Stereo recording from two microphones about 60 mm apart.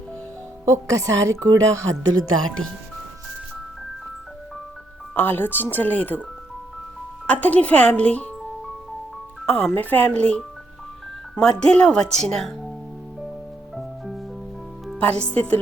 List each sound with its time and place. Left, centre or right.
0.6 s speech: right
5.1 s speech: left
7.3 s speech: left
9.7 s speech: left; by 12.7 s centre
13.7 s music: centre
14.9 s speech: left